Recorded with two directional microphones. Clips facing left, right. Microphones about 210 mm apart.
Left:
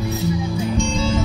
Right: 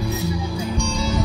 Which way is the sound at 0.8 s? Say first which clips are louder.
Left 3 dB; 25° left (ahead or behind).